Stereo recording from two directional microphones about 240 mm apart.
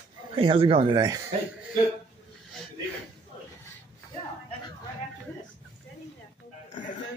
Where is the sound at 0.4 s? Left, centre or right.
Right.